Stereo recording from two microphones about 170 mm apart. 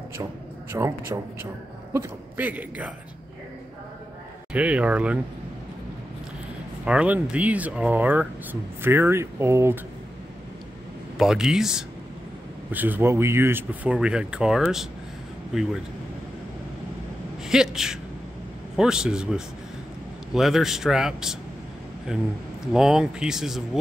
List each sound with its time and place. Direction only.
0.7 s speech: 15° right (ahead or behind)
4.5 s speech: 5° right (ahead or behind)
6.8 s speech: 5° right (ahead or behind)
11.1 s speech: 5° right (ahead or behind)
17.5 s speech: 5° right (ahead or behind)